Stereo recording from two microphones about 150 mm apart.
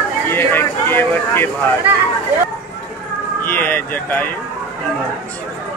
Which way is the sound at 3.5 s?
10° left (ahead or behind).